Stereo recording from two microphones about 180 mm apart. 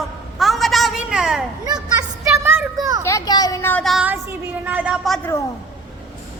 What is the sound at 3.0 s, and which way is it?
Speech, 20° left (ahead or behind).